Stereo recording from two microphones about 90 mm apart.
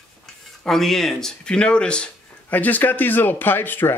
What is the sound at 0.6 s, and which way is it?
Speech, 5° left (ahead or behind).